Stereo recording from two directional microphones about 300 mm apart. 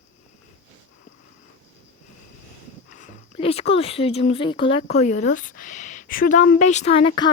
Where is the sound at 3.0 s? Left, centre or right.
Centre.